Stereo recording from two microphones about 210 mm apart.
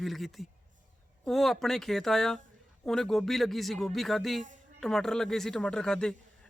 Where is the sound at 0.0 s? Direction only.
Centre (ahead or behind).